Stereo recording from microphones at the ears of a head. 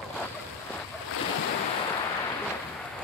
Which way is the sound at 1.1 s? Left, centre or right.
Left.